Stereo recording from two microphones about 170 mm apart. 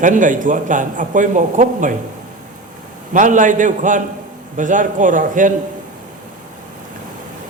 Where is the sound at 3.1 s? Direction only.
50° right (ahead or behind).